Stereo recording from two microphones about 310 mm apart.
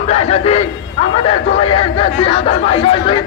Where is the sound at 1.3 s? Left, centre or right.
Centre.